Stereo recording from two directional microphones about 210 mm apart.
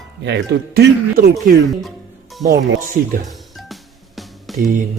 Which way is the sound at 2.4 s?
45° right (ahead or behind).